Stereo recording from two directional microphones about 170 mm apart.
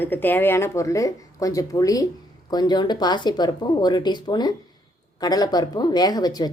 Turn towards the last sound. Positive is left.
turn(degrees=25)  # may be behind; listen again after turning